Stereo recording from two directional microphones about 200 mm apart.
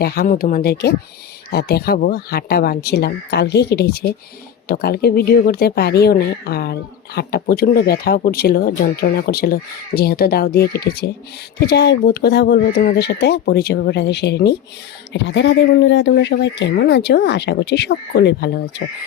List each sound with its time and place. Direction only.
0.0 s speech: 50° left (ahead or behind)